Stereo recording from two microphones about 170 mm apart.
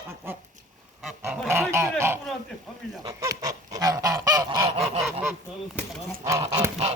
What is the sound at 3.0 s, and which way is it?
Goose, 20° right (ahead or behind).